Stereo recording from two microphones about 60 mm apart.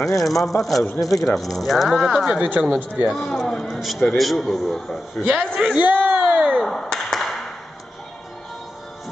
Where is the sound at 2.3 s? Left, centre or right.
Right.